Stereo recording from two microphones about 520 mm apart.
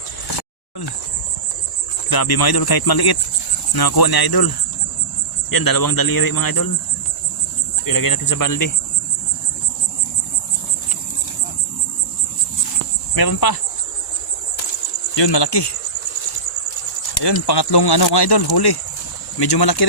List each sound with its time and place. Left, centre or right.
2.0 s speech: left
7.9 s speech: left
13.1 s speech: left
15.1 s speech: left
17.2 s speech: left